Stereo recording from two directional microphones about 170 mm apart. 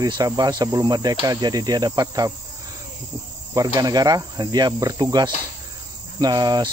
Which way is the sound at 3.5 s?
20° right (ahead or behind).